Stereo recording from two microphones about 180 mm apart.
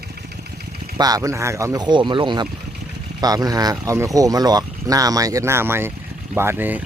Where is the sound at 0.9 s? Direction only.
20° right (ahead or behind).